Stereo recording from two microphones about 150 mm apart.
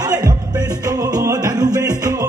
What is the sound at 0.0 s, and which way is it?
Music, 25° right (ahead or behind).